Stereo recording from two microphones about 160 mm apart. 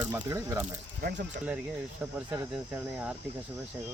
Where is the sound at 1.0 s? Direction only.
70° right (ahead or behind).